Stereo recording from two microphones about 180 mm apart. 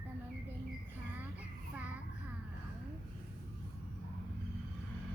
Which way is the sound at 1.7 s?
10° right (ahead or behind).